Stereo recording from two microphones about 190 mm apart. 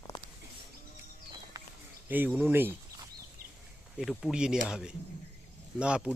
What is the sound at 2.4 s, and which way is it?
Speech, 10° right (ahead or behind).